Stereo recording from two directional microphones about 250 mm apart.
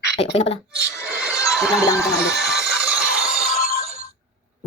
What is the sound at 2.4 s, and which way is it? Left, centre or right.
Music, centre.